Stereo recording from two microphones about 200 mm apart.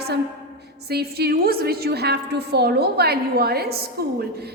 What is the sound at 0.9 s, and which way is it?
A woman's voice, 50° right (ahead or behind).